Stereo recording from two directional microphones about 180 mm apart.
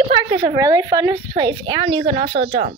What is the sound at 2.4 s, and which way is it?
Speech, 40° right (ahead or behind).